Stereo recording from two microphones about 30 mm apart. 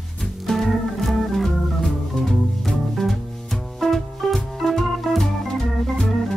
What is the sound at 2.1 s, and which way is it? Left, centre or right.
Music, left.